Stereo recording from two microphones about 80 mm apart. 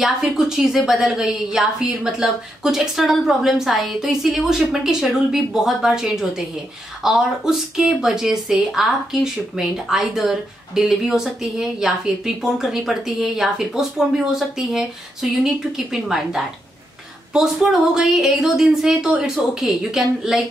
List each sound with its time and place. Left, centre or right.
0.0 s a woman's voice: centre
15.9 s a woman's voice: centre